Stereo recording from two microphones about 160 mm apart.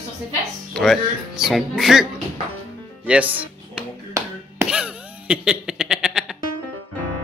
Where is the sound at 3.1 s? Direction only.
10° right (ahead or behind).